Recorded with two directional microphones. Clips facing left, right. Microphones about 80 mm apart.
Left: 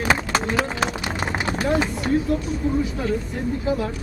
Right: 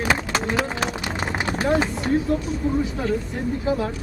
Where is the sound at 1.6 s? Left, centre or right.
Right.